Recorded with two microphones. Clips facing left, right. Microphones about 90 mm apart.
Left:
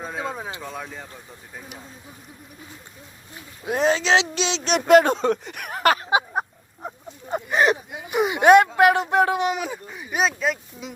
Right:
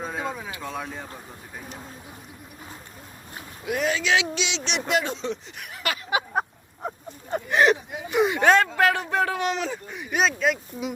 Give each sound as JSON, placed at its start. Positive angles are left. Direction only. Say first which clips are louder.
{"t": 0.3, "sound": "speech", "louder": "left 1 dB", "side_deg": 30}
{"t": 0.6, "sound": "speech", "louder": "right 1 dB", "side_deg": 0}
{"t": 3.7, "sound": "speech", "louder": "left 4 dB", "side_deg": 30}
{"t": 7.3, "sound": "a sound", "louder": "even", "side_deg": 10}
{"t": 8.1, "sound": "speech", "louder": "left 4 dB", "side_deg": 15}